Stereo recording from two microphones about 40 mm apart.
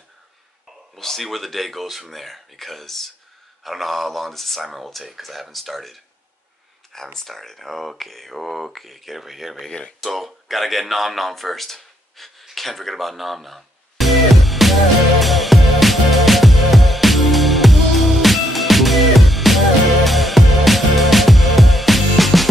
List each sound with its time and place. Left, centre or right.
0.9 s speech: centre
7.2 s speech: centre
9.7 s speech: centre
9.9 s speech: centre
12.4 s music: centre